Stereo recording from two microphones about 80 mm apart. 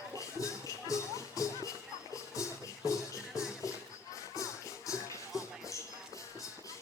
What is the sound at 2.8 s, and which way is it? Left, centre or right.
Music, left.